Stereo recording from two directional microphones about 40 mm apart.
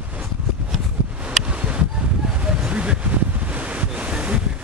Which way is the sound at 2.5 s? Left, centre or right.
Right.